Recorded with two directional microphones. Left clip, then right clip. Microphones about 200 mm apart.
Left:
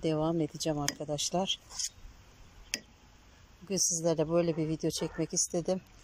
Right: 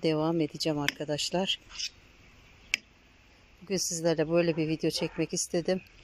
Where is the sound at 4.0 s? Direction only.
Centre (ahead or behind).